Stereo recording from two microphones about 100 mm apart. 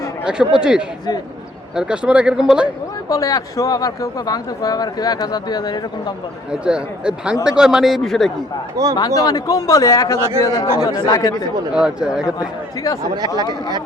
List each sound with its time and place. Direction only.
0.3 s speech: 10° right (ahead or behind)
3.1 s speech: 35° left (ahead or behind)
6.5 s a man's voice: 10° right (ahead or behind)
9.0 s speech: 40° left (ahead or behind)
11.7 s speech: 10° right (ahead or behind)
12.2 s speech: 35° left (ahead or behind)
13.1 s speech: 40° right (ahead or behind)